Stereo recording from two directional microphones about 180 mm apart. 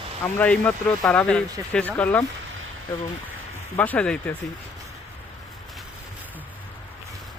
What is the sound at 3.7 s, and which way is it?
Speech, 10° left (ahead or behind).